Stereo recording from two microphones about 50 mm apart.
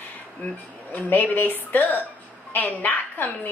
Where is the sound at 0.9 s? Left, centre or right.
Left.